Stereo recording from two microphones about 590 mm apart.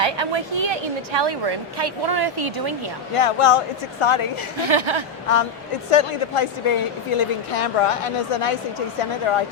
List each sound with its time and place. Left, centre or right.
0.0 s a woman's voice: right
3.2 s a woman's voice: left
4.7 s speech: right
5.9 s a woman's voice: left